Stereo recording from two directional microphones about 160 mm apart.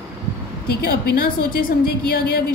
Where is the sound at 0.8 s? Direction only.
65° left (ahead or behind).